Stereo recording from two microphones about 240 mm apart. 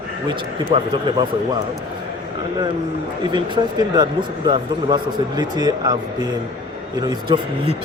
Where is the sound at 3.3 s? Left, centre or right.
Centre.